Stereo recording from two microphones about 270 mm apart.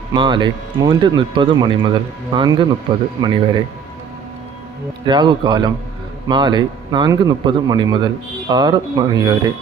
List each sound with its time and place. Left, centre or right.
0.1 s speech: centre
5.0 s speech: centre